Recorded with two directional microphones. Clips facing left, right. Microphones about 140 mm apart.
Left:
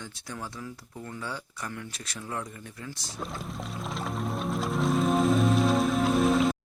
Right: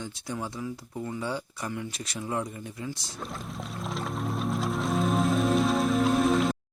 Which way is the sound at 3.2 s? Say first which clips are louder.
Left 1 dB; centre (ahead or behind).